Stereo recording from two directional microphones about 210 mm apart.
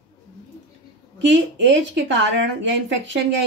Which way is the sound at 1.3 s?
60° right (ahead or behind).